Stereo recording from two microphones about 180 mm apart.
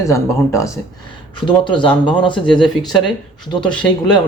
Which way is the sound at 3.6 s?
5° left (ahead or behind).